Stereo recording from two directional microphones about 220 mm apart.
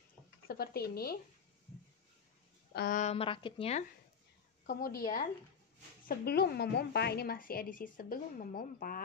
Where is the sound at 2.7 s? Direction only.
45° left (ahead or behind); by 3.8 s 25° left (ahead or behind).